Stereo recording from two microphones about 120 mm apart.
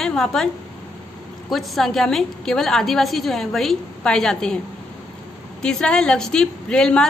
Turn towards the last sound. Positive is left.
turn(degrees=5)  # may be behind; listen again after turning